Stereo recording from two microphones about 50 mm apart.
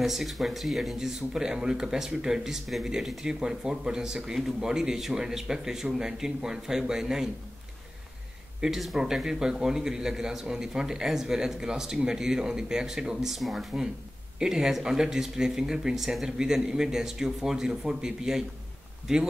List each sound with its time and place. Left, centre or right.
0.0 s speech: centre
8.5 s speech: centre